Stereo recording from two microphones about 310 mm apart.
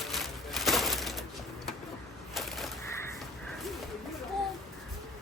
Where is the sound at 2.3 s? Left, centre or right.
Centre.